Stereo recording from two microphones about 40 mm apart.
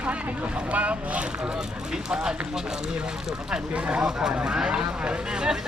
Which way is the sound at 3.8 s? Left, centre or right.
Right.